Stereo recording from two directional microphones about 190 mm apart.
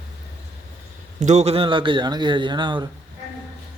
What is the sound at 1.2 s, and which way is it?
Speech, 35° right (ahead or behind).